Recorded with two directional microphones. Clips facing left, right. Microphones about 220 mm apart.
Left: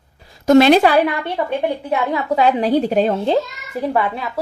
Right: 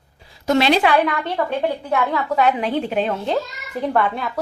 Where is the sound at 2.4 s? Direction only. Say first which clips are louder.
Left 5 dB; 35° left (ahead or behind).